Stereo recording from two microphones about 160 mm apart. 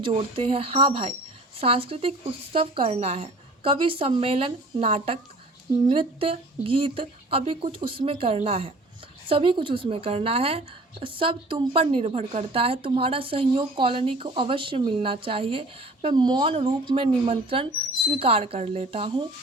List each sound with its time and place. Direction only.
0.0 s a woman's voice: 35° right (ahead or behind)